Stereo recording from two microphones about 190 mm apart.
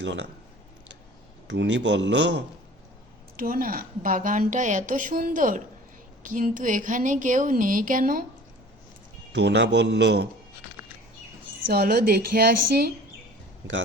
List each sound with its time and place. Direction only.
0.0 s a man's voice: 70° right (ahead or behind)
1.5 s a man's voice: 65° right (ahead or behind)
3.3 s a woman's voice: 50° right (ahead or behind)
9.3 s a woman's voice: 65° right (ahead or behind)
11.7 s a woman's voice: 55° right (ahead or behind)